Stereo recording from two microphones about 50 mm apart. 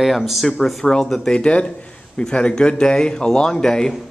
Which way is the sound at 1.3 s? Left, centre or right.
Centre.